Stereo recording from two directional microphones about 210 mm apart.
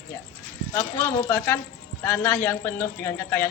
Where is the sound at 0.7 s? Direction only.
10° left (ahead or behind).